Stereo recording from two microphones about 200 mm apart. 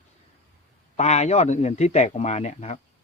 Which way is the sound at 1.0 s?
35° left (ahead or behind).